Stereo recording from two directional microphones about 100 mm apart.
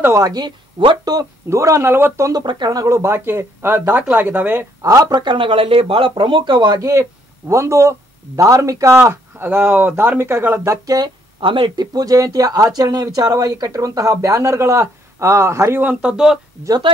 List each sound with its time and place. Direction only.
0.0 s speech: 35° right (ahead or behind)
0.8 s speech: 50° right (ahead or behind)
1.5 s speech: 30° right (ahead or behind)
2.4 s speech: 45° right (ahead or behind); by 4.6 s 20° right (ahead or behind)
4.8 s speech: 35° right (ahead or behind)
5.2 s speech: 55° right (ahead or behind); by 8.9 s 30° right (ahead or behind)
8.9 s speech: 20° right (ahead or behind)
11.4 s speech: 55° right (ahead or behind); by 16.3 s 10° right (ahead or behind)